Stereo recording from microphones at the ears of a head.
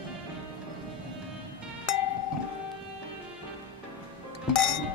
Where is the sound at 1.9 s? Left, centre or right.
Left.